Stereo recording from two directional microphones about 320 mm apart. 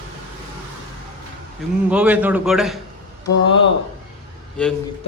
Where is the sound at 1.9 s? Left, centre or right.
Centre.